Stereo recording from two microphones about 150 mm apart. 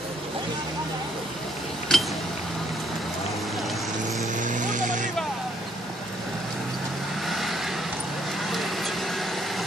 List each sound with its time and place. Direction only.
1.9 s a sound: 5° left (ahead or behind)
4.4 s vehicle: 55° right (ahead or behind)
7.2 s vehicle: centre (ahead or behind)